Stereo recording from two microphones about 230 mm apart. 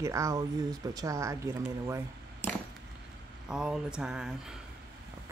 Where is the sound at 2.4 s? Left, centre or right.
Centre.